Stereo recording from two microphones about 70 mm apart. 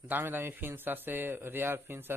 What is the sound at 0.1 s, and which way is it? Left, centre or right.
Speech, right.